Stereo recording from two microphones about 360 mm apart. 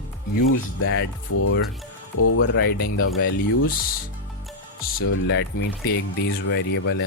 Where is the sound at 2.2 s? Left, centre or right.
Left.